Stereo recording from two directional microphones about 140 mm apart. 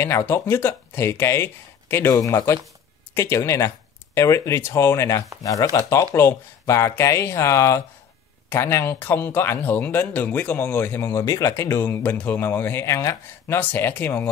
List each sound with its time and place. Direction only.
0.0 s speech: 15° left (ahead or behind)